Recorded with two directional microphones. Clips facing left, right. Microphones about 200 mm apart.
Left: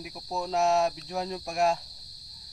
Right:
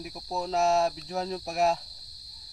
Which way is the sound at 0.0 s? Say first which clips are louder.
Right 1 dB; centre (ahead or behind).